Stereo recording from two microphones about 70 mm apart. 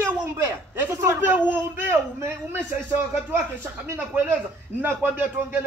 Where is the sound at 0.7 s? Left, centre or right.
Right.